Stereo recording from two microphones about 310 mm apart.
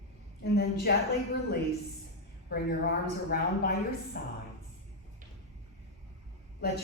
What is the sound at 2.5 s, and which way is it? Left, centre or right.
A woman's voice, left.